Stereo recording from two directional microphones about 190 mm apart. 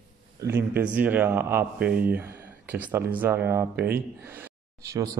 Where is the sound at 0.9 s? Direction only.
10° right (ahead or behind).